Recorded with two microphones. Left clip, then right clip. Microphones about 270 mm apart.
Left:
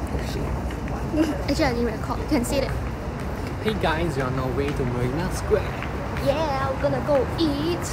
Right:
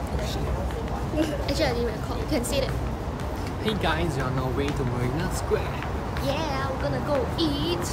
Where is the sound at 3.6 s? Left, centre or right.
Centre.